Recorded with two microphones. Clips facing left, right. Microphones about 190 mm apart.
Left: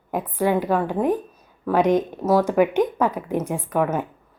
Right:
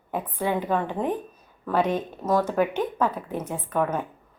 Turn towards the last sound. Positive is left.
turn(degrees=10)  # may be behind; listen again after turning